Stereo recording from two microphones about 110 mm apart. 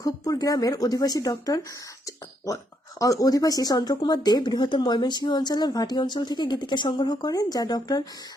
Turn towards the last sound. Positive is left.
turn(degrees=35)  # may be behind; listen again after turning